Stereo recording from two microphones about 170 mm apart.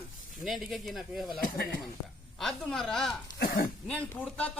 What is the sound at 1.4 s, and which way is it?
Speech, 65° left (ahead or behind).